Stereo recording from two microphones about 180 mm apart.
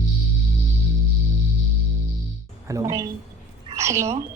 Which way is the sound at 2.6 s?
20° right (ahead or behind).